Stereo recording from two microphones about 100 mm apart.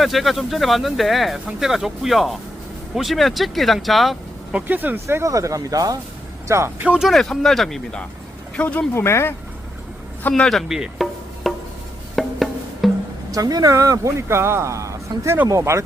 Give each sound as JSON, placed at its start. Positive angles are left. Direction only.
{"t": 0.0, "sound": "speech", "side_deg": 0}
{"t": 4.5, "sound": "speech", "side_deg": -20}
{"t": 6.8, "sound": "speech", "side_deg": -10}
{"t": 7.1, "sound": "speech", "side_deg": 5}
{"t": 9.0, "sound": "speech", "side_deg": 25}
{"t": 10.2, "sound": "speech", "side_deg": 10}
{"t": 10.7, "sound": "insect", "side_deg": 0}
{"t": 12.1, "sound": "wood block", "side_deg": 0}
{"t": 13.3, "sound": "speech", "side_deg": -40}